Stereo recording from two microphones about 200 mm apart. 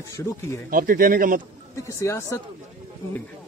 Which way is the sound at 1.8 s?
15° left (ahead or behind).